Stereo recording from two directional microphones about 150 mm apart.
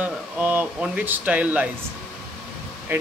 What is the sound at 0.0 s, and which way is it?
Speech, 10° right (ahead or behind).